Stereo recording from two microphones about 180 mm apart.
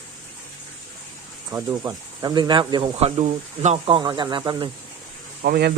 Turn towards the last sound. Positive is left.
turn(degrees=-60)  # may be behind; listen again after turning